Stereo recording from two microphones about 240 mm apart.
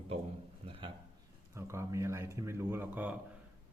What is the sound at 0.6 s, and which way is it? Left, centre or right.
Speech, right.